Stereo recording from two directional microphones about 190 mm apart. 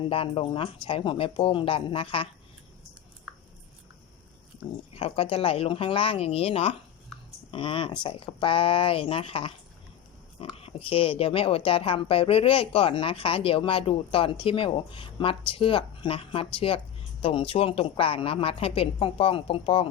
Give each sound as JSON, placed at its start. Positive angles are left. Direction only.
{"t": 0.0, "sound": "speech", "side_deg": 30}
{"t": 4.9, "sound": "speech", "side_deg": 30}
{"t": 10.5, "sound": "speech", "side_deg": 30}